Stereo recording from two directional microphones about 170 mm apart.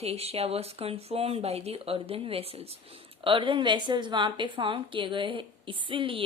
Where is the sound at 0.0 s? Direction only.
35° right (ahead or behind).